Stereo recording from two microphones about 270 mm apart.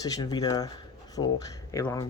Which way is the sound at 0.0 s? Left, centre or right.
Centre.